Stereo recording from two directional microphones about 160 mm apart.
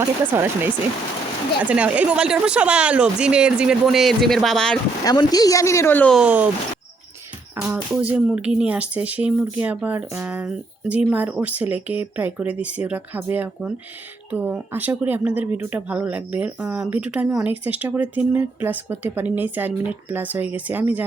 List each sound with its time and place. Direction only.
0.0 s speech: 15° right (ahead or behind); by 4.8 s 5° left (ahead or behind)
5.0 s speech: 25° left (ahead or behind)
6.1 s speech: 10° right (ahead or behind)
7.5 s speech: 10° right (ahead or behind)